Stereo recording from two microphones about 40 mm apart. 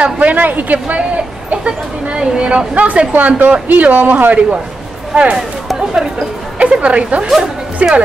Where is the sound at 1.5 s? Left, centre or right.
Right.